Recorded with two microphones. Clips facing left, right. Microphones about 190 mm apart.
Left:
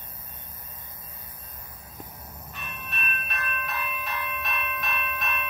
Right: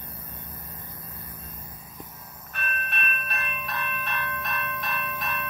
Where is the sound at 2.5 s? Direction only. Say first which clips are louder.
Right 7 dB; 65° right (ahead or behind).